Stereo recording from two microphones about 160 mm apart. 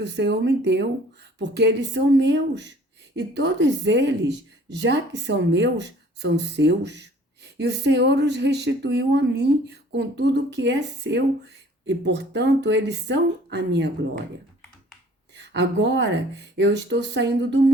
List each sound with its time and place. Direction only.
0.0 s speech: 90° right
15.4 s speech: 90° right